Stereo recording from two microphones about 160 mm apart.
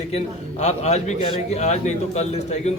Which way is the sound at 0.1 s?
40° left (ahead or behind).